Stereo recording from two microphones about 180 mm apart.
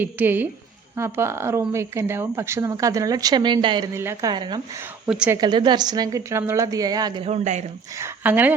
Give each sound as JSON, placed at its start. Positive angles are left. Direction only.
{"t": 0.0, "sound": "speech", "side_deg": -10}
{"t": 3.9, "sound": "a woman's voice", "side_deg": -15}
{"t": 5.0, "sound": "a woman's voice", "side_deg": -5}
{"t": 5.4, "sound": "a woman's voice", "side_deg": -25}
{"t": 7.3, "sound": "speech", "side_deg": -40}
{"t": 7.9, "sound": "speech", "side_deg": -10}